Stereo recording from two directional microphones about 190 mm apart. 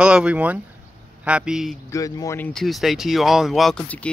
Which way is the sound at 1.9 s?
15° left (ahead or behind).